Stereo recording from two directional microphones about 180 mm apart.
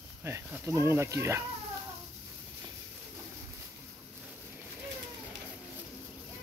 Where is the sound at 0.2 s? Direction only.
15° right (ahead or behind).